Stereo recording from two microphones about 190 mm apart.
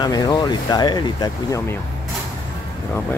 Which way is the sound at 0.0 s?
20° left (ahead or behind).